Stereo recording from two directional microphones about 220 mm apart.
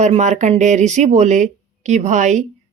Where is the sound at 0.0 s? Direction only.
30° right (ahead or behind).